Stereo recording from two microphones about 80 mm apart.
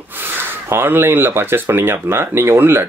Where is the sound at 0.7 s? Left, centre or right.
Right.